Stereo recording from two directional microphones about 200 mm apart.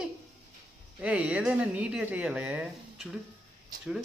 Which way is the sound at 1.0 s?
5° right (ahead or behind).